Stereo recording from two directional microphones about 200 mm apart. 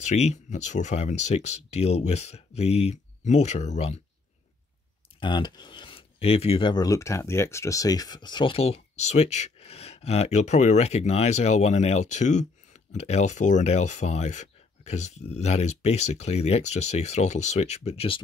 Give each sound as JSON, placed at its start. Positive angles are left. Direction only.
{"t": 0.0, "sound": "speech", "side_deg": 35}
{"t": 5.2, "sound": "speech", "side_deg": 20}